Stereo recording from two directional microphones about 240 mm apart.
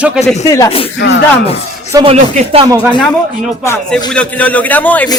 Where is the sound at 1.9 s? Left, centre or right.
Right.